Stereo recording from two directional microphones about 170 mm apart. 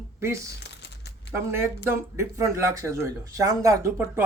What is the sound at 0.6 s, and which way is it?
Crumpling, 90° left.